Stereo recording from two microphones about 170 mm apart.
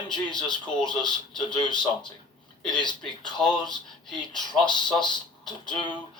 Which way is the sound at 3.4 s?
5° left (ahead or behind).